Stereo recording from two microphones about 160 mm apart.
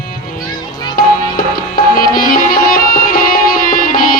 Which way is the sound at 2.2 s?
65° left (ahead or behind).